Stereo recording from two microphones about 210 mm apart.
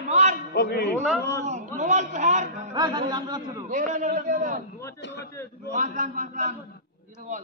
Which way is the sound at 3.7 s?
35° right (ahead or behind).